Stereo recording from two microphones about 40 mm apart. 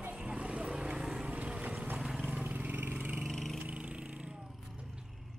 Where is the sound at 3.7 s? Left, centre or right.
Right.